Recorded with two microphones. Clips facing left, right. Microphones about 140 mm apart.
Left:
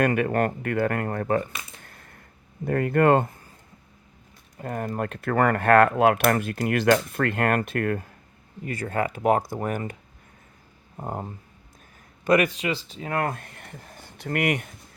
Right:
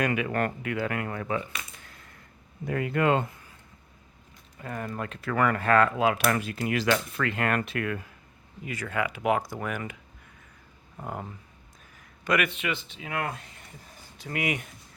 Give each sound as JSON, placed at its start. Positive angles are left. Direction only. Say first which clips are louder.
{"t": 0.0, "sound": "speech", "louder": "left 5 dB", "side_deg": 50}
{"t": 1.8, "sound": "a sound", "louder": "left 2 dB", "side_deg": 50}
{"t": 2.6, "sound": "speech", "louder": "left 5 dB", "side_deg": 50}
{"t": 4.5, "sound": "speech", "louder": "left 5 dB", "side_deg": 45}